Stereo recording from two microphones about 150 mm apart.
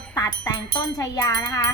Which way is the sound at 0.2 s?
25° left (ahead or behind).